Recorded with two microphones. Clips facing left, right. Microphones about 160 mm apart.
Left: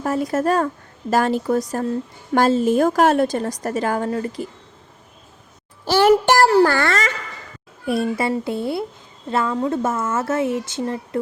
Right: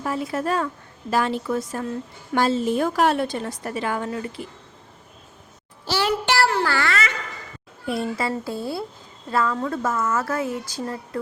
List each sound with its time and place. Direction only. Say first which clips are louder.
0.0 s a woman's voice: left 5 dB; 40° left (ahead or behind)
5.8 s a child's voice: left 9 dB; 50° left (ahead or behind)
7.9 s speech: left 5 dB; 25° left (ahead or behind)